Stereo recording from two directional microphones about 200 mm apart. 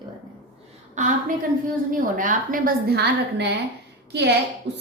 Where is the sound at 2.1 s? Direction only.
40° right (ahead or behind).